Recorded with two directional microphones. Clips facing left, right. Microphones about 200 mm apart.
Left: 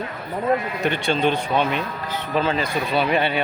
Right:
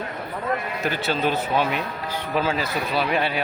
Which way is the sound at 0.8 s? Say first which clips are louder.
Left 3 dB; 5° right (ahead or behind).